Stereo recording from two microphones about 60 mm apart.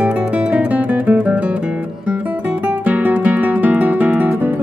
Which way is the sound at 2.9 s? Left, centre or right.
Right.